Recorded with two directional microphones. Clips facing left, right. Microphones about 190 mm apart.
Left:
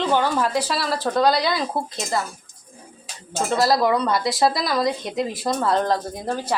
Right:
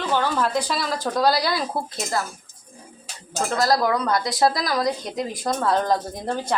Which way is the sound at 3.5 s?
5° left (ahead or behind).